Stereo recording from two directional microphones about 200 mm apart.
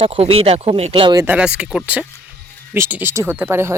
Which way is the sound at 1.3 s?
5° right (ahead or behind).